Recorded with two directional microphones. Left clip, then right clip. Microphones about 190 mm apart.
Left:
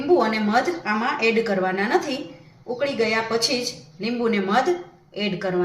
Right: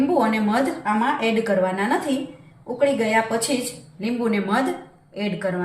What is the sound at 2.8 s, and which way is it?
A woman's voice, 15° left (ahead or behind).